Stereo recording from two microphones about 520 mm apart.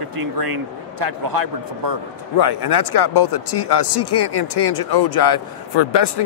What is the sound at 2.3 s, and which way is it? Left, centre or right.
Speech, left.